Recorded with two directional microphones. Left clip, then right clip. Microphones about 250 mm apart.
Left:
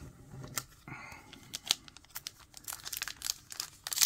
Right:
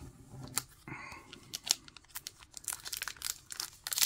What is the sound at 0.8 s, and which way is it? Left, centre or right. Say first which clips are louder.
Tearing: right 1 dB; centre.